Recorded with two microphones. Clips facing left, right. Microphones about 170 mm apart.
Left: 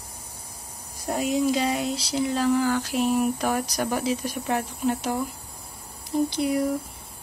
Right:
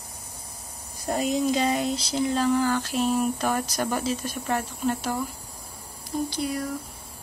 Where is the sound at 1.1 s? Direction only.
10° left (ahead or behind).